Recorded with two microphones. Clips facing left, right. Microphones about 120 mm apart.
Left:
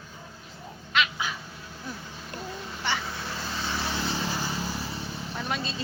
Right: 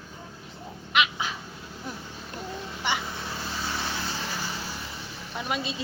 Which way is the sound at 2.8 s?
15° right (ahead or behind).